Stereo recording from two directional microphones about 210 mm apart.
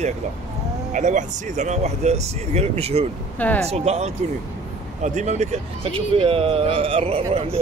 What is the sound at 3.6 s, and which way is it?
Speech, 30° right (ahead or behind).